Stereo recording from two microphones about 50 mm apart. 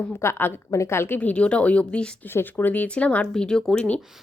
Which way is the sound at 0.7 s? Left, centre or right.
Left.